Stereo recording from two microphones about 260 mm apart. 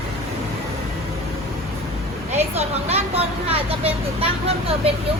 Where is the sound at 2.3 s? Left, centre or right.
Right.